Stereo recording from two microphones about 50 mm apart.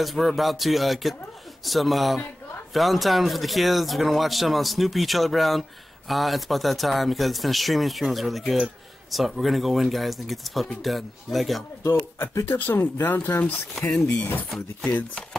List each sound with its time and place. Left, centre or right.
0.0 s speech: centre
11.9 s speech: left
12.5 s speech: left